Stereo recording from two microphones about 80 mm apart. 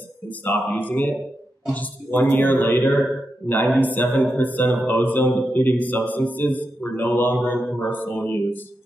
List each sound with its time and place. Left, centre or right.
0.3 s a man's voice: left